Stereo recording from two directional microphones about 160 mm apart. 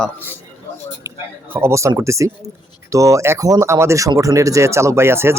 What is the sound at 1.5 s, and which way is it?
Speech, 15° right (ahead or behind).